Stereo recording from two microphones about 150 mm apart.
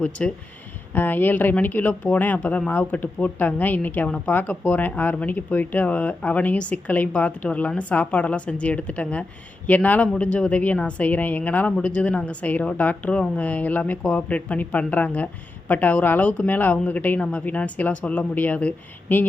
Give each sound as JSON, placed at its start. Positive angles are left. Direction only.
{"t": 0.2, "sound": "speech", "side_deg": 5}